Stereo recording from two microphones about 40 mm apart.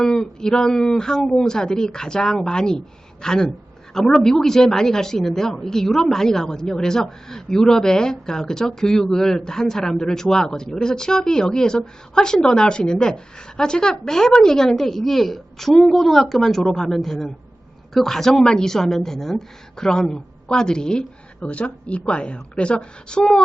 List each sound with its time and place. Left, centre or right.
0.0 s a woman's voice: centre
21.4 s a woman's voice: left